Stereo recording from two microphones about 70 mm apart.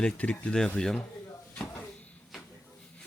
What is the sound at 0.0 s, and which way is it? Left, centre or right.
Speech, centre.